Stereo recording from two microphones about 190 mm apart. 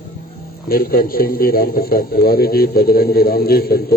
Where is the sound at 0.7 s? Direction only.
50° left (ahead or behind).